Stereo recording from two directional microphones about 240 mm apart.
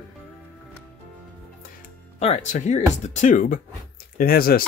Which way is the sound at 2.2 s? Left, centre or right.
Left.